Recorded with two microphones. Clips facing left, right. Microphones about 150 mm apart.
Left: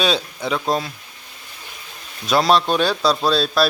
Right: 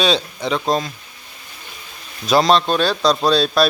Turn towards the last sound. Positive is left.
turn(degrees=0)  # may be behind; listen again after turning